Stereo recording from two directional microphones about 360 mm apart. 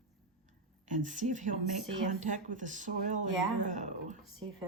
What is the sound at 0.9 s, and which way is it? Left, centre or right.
Speech, right.